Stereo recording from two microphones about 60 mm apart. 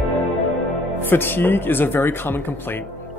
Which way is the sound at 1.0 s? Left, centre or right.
Left.